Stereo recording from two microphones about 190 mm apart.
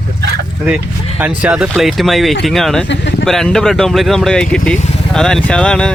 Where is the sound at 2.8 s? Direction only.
70° left (ahead or behind).